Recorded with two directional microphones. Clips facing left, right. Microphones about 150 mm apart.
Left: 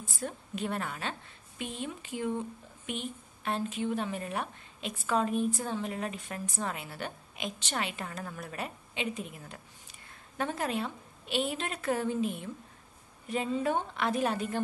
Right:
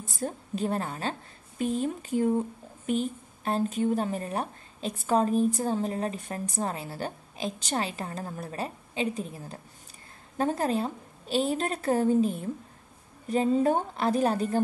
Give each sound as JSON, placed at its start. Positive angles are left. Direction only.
{"t": 0.3, "sound": "a woman's voice", "side_deg": -35}